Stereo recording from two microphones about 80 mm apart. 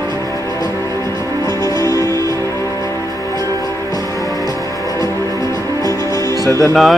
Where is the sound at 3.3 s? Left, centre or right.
Right.